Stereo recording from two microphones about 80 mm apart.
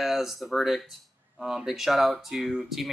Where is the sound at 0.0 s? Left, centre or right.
Centre.